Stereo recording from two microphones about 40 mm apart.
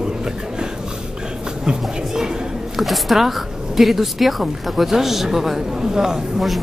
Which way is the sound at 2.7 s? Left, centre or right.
Centre.